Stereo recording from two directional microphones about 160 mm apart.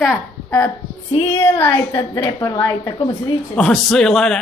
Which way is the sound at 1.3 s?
15° left (ahead or behind).